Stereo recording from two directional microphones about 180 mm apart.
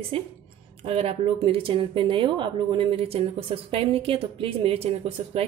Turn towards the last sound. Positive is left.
turn(degrees=-30)  # may be behind; listen again after turning